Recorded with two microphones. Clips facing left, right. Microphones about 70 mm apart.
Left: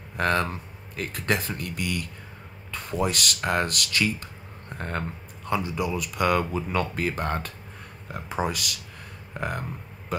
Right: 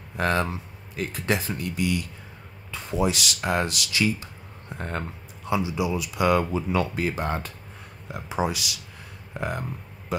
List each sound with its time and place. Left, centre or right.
0.2 s speech: left